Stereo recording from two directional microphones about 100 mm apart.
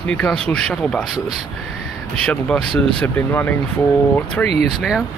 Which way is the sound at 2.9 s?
15° left (ahead or behind).